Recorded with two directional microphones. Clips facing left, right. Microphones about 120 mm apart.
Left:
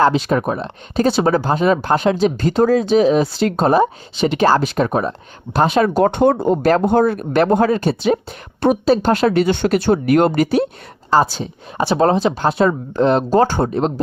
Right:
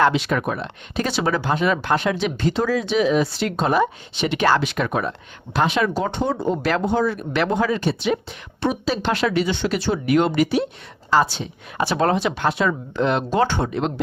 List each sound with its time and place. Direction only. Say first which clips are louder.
0.0 s speech: left 4 dB; 35° left (ahead or behind)
5.9 s speech: left 9 dB; 55° left (ahead or behind); by 14.0 s 40° left (ahead or behind)